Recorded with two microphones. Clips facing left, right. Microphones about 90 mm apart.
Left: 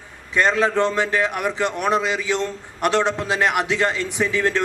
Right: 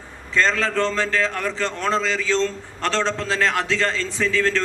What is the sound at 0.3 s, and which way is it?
A man's voice, 15° left (ahead or behind).